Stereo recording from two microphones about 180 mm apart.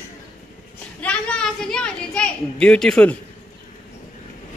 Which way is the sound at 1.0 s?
5° left (ahead or behind).